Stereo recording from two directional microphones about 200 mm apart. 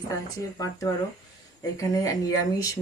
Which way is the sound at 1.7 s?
15° left (ahead or behind).